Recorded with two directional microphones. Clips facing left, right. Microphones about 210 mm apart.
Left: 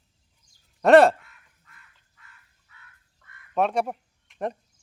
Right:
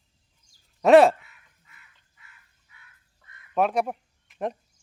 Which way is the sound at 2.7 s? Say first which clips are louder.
Left 2 dB; 15° right (ahead or behind).